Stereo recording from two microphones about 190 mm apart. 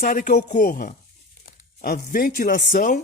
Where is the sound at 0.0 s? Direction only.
45° left (ahead or behind).